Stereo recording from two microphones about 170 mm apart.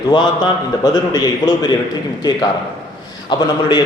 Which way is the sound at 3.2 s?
25° left (ahead or behind).